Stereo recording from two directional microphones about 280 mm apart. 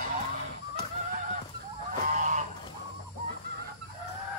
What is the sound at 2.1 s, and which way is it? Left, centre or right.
Fowl, right.